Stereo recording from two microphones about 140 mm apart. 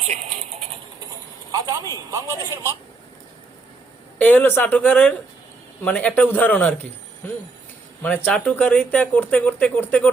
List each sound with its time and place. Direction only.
0.0 s a sound: 50° right (ahead or behind)
1.5 s speech: 25° right (ahead or behind)
4.2 s speech: 10° left (ahead or behind)
8.0 s speech: 10° left (ahead or behind)